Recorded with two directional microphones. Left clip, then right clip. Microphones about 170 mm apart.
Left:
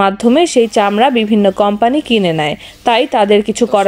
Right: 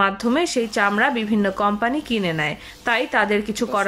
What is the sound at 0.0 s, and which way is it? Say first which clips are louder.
A woman's voice: left 9 dB; 20° left (ahead or behind).